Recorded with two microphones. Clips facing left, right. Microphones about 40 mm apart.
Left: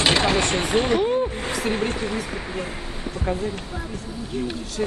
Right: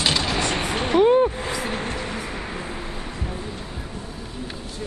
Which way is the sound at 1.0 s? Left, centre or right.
Right.